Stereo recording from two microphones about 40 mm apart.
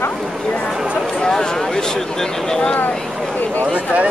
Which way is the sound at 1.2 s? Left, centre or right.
Centre.